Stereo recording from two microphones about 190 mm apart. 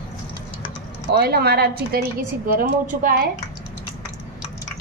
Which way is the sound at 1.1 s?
55° right (ahead or behind).